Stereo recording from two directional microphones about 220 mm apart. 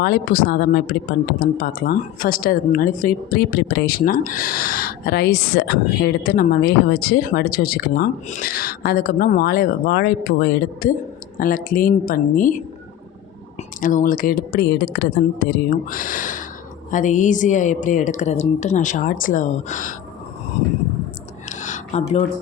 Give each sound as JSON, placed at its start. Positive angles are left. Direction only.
{"t": 0.0, "sound": "a woman's voice", "side_deg": 40}
{"t": 13.8, "sound": "a woman's voice", "side_deg": 35}
{"t": 21.5, "sound": "a sound", "side_deg": 35}